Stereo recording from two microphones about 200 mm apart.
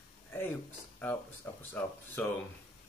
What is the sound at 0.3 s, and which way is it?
Speech, 10° left (ahead or behind).